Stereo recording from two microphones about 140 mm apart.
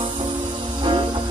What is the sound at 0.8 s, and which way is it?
Music, 35° right (ahead or behind).